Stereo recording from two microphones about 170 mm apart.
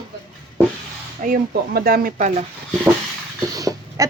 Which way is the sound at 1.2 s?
60° right (ahead or behind).